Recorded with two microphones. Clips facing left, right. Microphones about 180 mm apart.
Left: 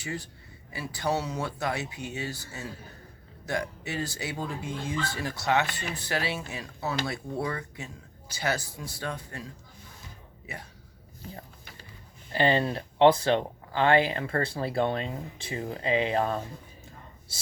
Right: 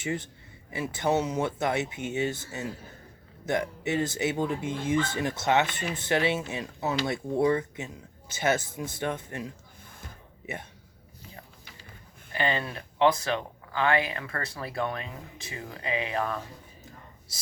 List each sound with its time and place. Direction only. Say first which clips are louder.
0.0 s speech: right 4 dB; 20° right (ahead or behind)
11.2 s a sound: left 5 dB; 50° left (ahead or behind)
12.3 s speech: left 5 dB; 30° left (ahead or behind)